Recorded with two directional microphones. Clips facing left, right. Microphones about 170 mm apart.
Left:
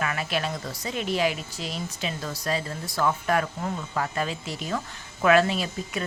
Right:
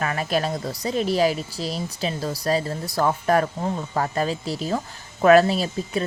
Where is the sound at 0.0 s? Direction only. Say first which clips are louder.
Right 4 dB; 40° right (ahead or behind).